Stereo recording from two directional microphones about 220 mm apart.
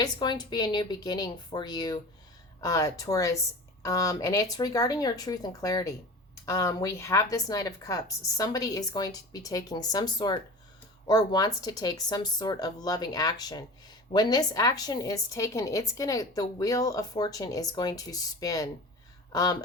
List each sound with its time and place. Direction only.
0.0 s a woman's voice: 20° left (ahead or behind)